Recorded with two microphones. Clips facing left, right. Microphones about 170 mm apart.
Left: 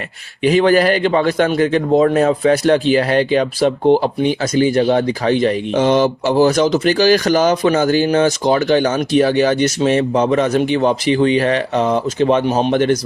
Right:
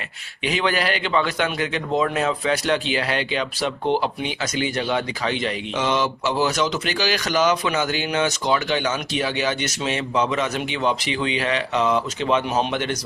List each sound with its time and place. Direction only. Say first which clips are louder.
0.4 s speech: left 11 dB; 40° left (ahead or behind)